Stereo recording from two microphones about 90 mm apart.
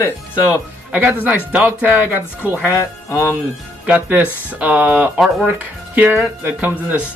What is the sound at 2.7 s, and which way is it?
Speech, 35° left (ahead or behind).